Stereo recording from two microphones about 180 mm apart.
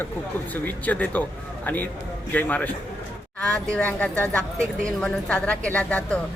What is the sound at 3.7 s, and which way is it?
A woman's voice, 10° left (ahead or behind).